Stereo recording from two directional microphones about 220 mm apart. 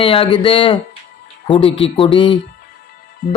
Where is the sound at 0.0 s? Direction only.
25° left (ahead or behind).